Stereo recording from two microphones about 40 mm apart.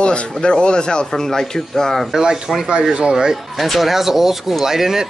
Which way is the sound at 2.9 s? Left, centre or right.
Right.